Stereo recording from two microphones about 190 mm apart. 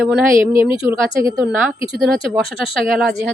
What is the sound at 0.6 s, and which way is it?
Speech, 30° left (ahead or behind).